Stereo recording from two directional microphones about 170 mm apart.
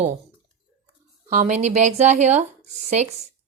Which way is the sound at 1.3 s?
45° right (ahead or behind).